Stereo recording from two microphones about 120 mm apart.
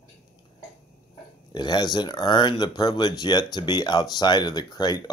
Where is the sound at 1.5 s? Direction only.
35° left (ahead or behind).